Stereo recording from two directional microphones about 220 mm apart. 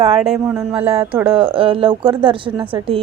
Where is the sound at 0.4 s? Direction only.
5° right (ahead or behind).